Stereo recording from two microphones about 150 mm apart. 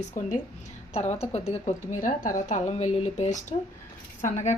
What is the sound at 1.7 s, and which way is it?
Speech, 60° left (ahead or behind).